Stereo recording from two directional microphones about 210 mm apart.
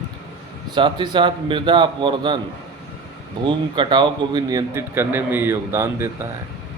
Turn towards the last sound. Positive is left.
turn(degrees=-10)  # may be behind; listen again after turning